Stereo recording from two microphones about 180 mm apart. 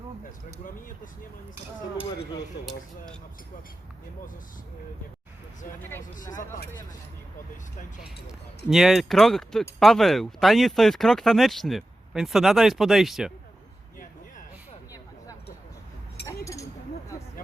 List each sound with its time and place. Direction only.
6.1 s speech: 45° left (ahead or behind)
8.0 s speech: 5° right (ahead or behind)
16.2 s a sound: 15° left (ahead or behind)